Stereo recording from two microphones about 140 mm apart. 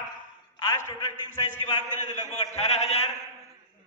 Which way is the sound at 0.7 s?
20° left (ahead or behind).